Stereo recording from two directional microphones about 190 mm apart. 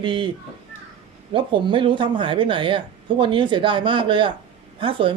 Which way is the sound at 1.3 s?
25° right (ahead or behind).